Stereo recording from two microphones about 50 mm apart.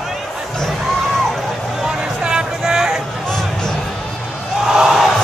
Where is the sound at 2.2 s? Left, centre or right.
Centre.